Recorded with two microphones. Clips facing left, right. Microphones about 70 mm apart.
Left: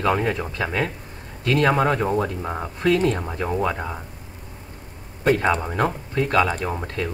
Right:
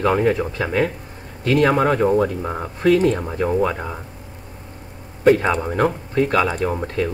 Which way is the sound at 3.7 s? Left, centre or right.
Centre.